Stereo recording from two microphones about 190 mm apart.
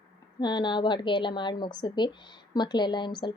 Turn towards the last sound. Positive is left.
turn(degrees=25)  # may be behind; listen again after turning